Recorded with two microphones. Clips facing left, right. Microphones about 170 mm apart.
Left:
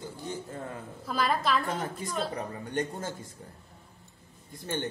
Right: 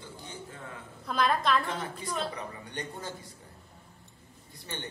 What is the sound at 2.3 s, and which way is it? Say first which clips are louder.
Speech: left 6 dB; 45° left (ahead or behind).